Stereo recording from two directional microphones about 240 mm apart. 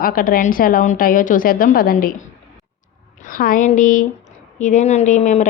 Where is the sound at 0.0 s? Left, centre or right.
Left.